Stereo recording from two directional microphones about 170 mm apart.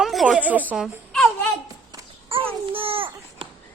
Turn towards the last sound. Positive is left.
turn(degrees=-30)  # may be behind; listen again after turning